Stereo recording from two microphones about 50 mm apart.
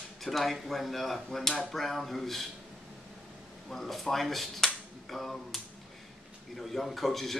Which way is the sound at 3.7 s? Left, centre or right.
Centre.